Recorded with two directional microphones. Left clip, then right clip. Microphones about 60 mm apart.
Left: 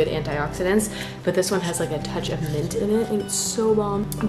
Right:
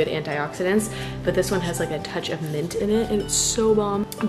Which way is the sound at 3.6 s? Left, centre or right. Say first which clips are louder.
Right 1 dB; right.